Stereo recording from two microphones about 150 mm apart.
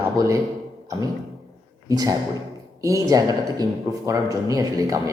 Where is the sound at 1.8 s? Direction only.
25° right (ahead or behind).